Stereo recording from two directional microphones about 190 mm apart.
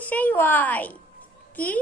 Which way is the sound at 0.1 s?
10° left (ahead or behind).